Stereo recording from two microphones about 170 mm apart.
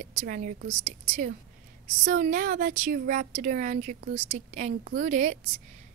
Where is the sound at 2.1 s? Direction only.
50° right (ahead or behind).